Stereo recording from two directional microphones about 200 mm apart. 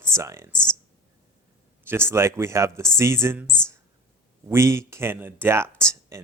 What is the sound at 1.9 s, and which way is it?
Speech, 10° right (ahead or behind).